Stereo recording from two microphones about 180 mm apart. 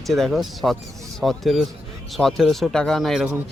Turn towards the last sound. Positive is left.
turn(degrees=0)  # may be behind; listen again after turning